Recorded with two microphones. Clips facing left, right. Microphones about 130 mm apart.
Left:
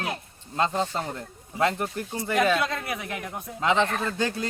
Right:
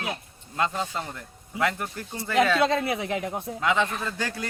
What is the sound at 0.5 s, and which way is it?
Speech, 25° left (ahead or behind).